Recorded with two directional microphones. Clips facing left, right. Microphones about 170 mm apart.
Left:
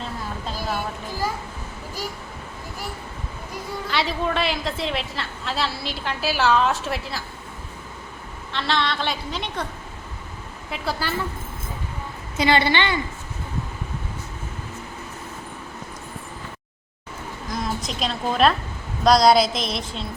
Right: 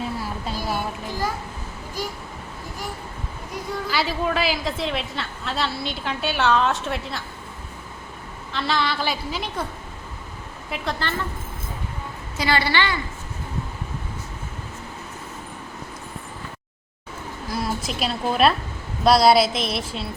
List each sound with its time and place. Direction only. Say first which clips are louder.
0.0 s a sound: right 2 dB; 10° right (ahead or behind)
3.5 s a woman's voice: right 1 dB; centre (ahead or behind)
8.5 s a woman's voice: even; centre (ahead or behind)
10.7 s a woman's voice: even; 5° left (ahead or behind)
12.4 s a woman's voice: left 3 dB; 20° left (ahead or behind)
17.5 s a woman's voice: right 1 dB; 5° right (ahead or behind)